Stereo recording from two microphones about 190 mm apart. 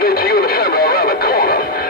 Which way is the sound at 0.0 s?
55° left (ahead or behind).